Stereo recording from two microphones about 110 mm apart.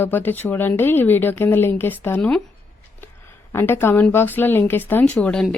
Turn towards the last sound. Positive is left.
turn(degrees=5)  # may be behind; listen again after turning